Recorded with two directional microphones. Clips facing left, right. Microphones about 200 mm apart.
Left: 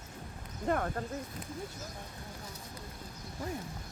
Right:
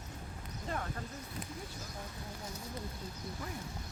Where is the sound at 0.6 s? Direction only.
55° left (ahead or behind).